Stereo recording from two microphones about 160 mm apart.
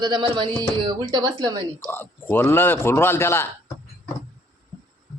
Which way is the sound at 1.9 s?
15° left (ahead or behind).